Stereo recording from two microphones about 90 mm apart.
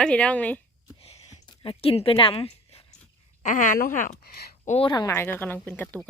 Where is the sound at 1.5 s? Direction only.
85° left.